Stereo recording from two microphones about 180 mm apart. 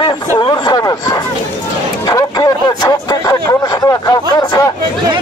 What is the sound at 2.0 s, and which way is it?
Music, 20° left (ahead or behind).